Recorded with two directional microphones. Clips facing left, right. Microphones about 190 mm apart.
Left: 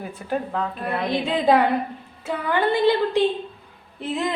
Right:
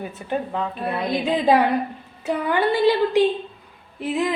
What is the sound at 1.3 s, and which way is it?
A woman's voice, 10° right (ahead or behind).